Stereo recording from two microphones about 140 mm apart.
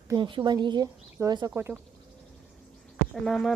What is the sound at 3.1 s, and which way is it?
Speech, centre (ahead or behind).